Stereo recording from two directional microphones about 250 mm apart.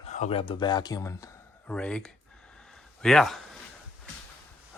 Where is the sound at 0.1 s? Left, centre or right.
Left; by 3.6 s centre.